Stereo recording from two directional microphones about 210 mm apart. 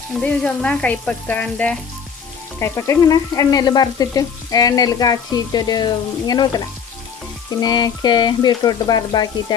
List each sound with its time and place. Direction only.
0.1 s frying: 5° left (ahead or behind)